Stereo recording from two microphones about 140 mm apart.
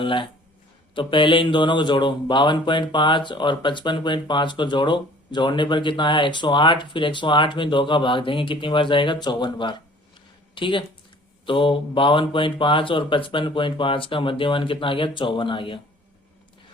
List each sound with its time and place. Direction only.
0.0 s speech: 35° left (ahead or behind)